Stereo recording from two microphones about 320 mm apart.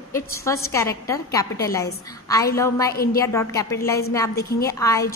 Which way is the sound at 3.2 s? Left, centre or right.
Centre.